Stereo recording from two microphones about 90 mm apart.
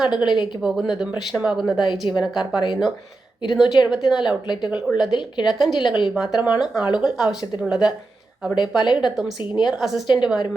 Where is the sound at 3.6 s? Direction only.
55° left (ahead or behind).